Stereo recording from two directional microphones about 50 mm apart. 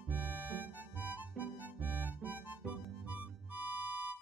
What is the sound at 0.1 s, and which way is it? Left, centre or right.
Music, right.